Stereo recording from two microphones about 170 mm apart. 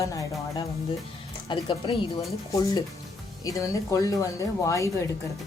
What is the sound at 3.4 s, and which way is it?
Speech, 20° left (ahead or behind).